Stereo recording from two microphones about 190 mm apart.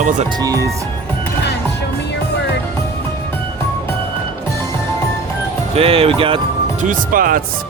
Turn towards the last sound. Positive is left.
turn(degrees=-45)  # may be behind; listen again after turning